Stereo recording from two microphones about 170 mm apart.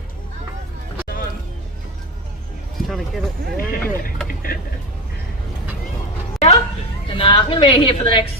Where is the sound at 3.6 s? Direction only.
55° left (ahead or behind).